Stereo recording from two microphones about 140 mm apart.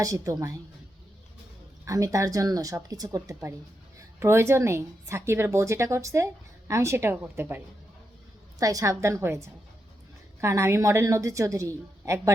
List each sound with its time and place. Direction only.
0.0 s a woman's voice: 25° right (ahead or behind)
1.8 s a woman's voice: 25° right (ahead or behind)
10.4 s a woman's voice: 20° right (ahead or behind)